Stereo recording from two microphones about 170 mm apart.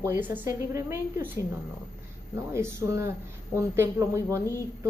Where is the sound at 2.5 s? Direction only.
15° right (ahead or behind).